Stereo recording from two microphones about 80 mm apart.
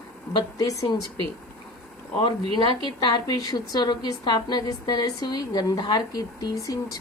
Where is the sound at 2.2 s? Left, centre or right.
Left.